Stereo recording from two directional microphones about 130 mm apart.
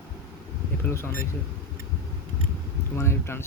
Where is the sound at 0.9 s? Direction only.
15° left (ahead or behind).